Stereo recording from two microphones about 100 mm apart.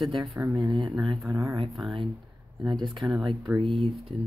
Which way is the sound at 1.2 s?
30° right (ahead or behind).